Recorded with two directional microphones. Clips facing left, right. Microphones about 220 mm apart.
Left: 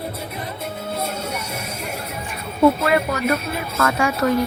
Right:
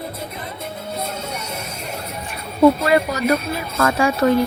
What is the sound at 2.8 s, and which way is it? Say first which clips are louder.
A woman's voice: right 2 dB; 35° right (ahead or behind).